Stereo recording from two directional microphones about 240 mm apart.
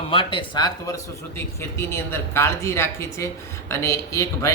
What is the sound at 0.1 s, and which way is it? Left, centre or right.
Speech, left.